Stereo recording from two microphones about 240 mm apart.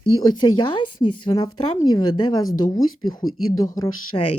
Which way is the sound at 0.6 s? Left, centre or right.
Left.